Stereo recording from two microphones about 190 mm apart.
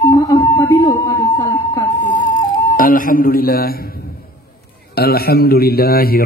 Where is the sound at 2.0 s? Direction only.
40° left (ahead or behind).